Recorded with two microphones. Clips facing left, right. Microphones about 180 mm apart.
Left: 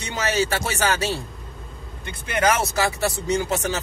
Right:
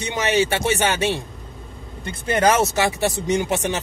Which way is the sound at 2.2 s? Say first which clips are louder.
Right 4 dB; 30° right (ahead or behind).